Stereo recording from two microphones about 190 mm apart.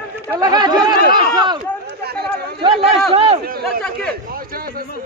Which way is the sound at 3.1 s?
30° right (ahead or behind).